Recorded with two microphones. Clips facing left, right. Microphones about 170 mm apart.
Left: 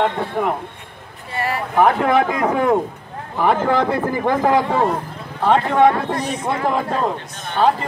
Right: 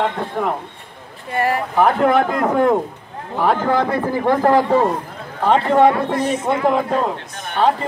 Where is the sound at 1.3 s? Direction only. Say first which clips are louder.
Right 4 dB; 50° right (ahead or behind).